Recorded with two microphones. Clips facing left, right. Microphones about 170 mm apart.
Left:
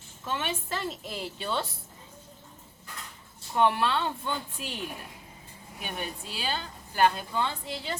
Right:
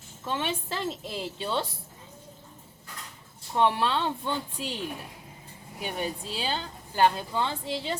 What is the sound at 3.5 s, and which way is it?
Speech, 25° right (ahead or behind).